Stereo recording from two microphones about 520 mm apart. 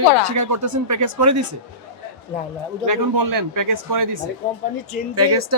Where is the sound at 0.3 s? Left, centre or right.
Right.